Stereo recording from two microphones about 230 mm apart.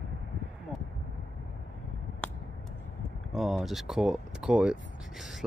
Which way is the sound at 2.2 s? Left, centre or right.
Centre.